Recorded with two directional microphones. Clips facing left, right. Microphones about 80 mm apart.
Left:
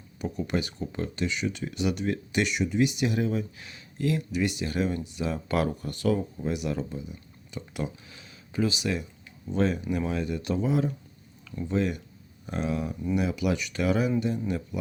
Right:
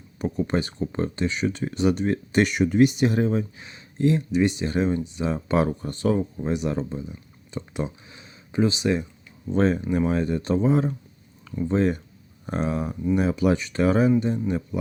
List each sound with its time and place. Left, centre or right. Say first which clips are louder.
0.2 s speech: right 5 dB; right